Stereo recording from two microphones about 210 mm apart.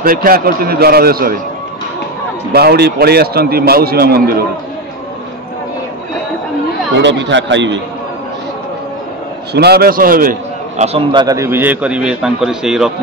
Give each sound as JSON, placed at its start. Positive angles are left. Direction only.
{"t": 0.0, "sound": "a man's voice", "side_deg": -40}
{"t": 2.5, "sound": "a man's voice", "side_deg": -50}
{"t": 7.0, "sound": "speech", "side_deg": -55}
{"t": 9.5, "sound": "a man's voice", "side_deg": -50}
{"t": 10.8, "sound": "a man's voice", "side_deg": -25}